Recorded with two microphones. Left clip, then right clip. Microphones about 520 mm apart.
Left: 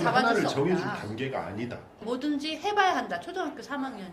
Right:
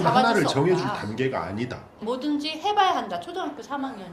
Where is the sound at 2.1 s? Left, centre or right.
Centre.